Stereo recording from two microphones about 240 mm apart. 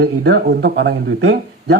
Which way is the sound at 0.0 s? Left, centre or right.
Right.